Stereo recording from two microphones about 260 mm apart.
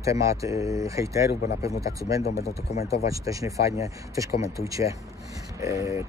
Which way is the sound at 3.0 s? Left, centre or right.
Centre.